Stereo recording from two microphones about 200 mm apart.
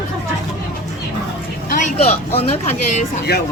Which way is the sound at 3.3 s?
50° left (ahead or behind).